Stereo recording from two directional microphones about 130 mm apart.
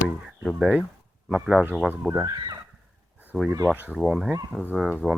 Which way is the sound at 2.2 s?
30° right (ahead or behind).